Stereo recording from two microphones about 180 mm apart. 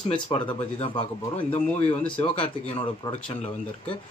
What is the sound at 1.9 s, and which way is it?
Speech, 25° left (ahead or behind).